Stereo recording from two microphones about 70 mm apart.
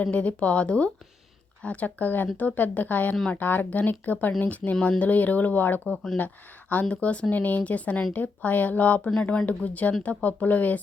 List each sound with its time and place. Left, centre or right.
0.0 s speech: centre
5.9 s speech: centre
6.1 s speech: left